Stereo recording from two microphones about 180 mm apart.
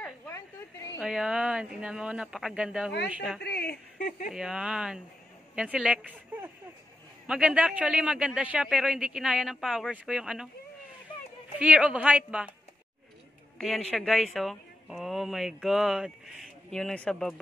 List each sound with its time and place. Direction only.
0.9 s a woman's voice: 5° right (ahead or behind)
3.4 s speech: 60° left (ahead or behind)
4.3 s a woman's voice: 5° right (ahead or behind)
11.5 s a woman's voice: 5° right (ahead or behind)
13.6 s speech: centre (ahead or behind)